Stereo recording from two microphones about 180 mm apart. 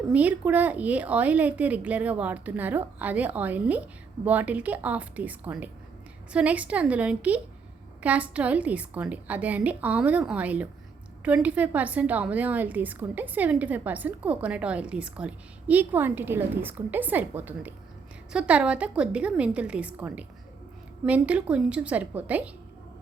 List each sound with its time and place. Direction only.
0.1 s a woman's voice: 10° right (ahead or behind)